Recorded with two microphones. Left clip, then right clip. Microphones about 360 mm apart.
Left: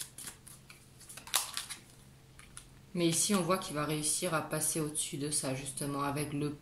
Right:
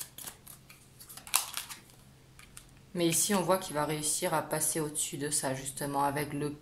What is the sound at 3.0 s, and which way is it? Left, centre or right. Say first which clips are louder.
A woman's voice: right 2 dB; centre.